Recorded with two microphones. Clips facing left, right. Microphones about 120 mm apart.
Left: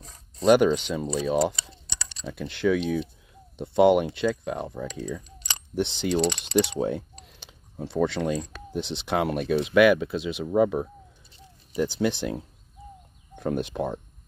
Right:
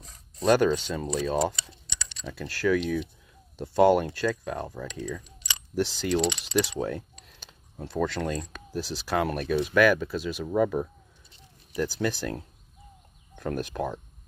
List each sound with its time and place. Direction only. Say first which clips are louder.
0.5 s speech: left 3 dB; 15° left (ahead or behind)
13.4 s speech: left 3 dB; 20° left (ahead or behind)